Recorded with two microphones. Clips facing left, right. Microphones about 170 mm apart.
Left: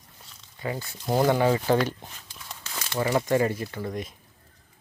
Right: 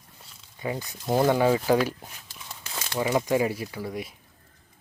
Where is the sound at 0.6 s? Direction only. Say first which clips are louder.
Right 1 dB; 20° right (ahead or behind).